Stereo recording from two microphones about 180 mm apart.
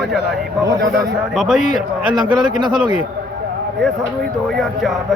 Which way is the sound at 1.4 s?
Centre (ahead or behind).